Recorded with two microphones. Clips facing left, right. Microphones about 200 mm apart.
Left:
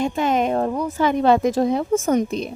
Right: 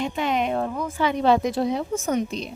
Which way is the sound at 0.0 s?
45° left (ahead or behind).